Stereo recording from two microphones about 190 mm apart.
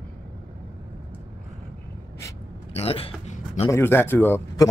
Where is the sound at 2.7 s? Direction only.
30° left (ahead or behind).